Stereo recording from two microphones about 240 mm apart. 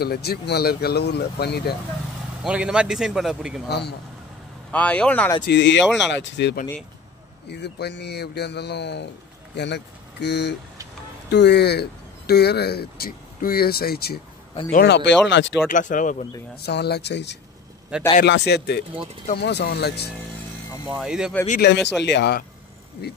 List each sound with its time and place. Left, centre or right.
0.0 s speech: left
2.4 s a man's voice: centre
3.6 s speech: left
4.6 s a man's voice: centre
5.5 s speech: left
14.5 s speech: left
14.8 s speech: left
15.7 s speech: left
20.9 s a man's voice: centre
21.5 s speech: left